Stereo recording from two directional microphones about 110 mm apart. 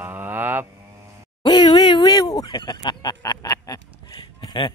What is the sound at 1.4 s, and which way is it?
Speech, 45° left (ahead or behind).